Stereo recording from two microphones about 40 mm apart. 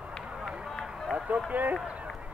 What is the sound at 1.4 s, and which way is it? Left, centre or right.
Speech, right.